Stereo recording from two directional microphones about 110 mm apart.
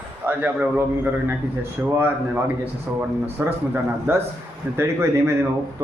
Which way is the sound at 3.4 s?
25° right (ahead or behind).